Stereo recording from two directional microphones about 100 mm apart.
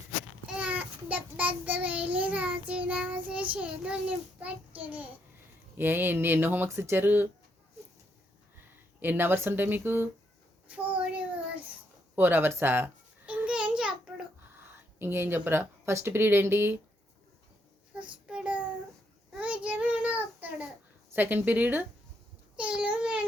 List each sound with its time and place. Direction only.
0.4 s child singing: 10° right (ahead or behind)
3.5 s a child's voice: 15° right (ahead or behind)
9.0 s speech: 20° right (ahead or behind)
12.1 s babbling: 20° right (ahead or behind)
14.6 s speech: 20° right (ahead or behind)
18.3 s child singing: 10° right (ahead or behind)
21.1 s speech: 20° right (ahead or behind)
22.5 s a sound: 10° right (ahead or behind)